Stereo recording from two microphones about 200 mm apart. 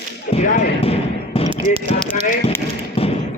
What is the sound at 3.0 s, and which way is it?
Thump, 30° left (ahead or behind).